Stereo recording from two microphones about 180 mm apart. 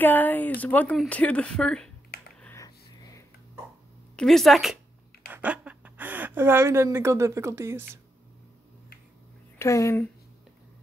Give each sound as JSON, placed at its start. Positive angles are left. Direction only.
{"t": 0.0, "sound": "speech", "side_deg": 10}
{"t": 2.4, "sound": "a sound", "side_deg": 15}
{"t": 4.2, "sound": "a woman's voice", "side_deg": 0}
{"t": 9.6, "sound": "speech", "side_deg": 15}